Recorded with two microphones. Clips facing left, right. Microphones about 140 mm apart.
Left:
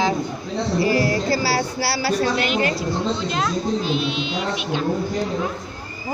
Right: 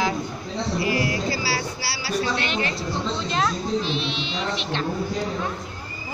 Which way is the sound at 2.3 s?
5° left (ahead or behind).